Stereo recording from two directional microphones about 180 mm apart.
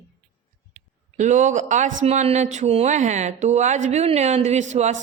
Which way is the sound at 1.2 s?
40° right (ahead or behind).